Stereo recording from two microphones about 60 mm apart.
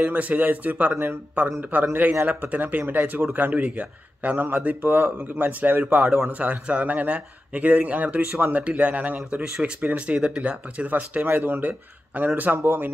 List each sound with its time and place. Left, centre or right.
0.0 s speech: right
9.4 s speech: centre; by 12.9 s right